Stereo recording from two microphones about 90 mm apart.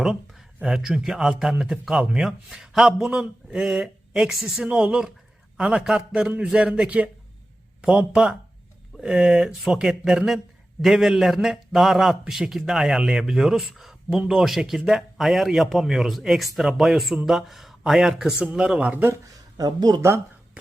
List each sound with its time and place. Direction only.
0.0 s a man's voice: 5° right (ahead or behind)
19.5 s speech: 45° right (ahead or behind)
20.0 s speech: 30° right (ahead or behind)